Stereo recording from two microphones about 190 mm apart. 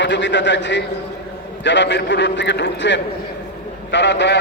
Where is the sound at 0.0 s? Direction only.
70° left (ahead or behind).